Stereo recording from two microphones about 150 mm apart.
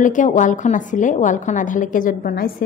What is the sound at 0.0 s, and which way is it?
A woman's voice, 60° left (ahead or behind).